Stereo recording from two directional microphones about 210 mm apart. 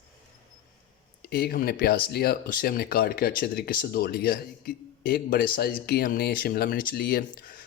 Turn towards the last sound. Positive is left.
turn(degrees=45)  # may be behind; listen again after turning